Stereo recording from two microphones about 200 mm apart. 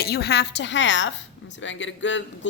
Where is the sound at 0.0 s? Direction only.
55° left (ahead or behind).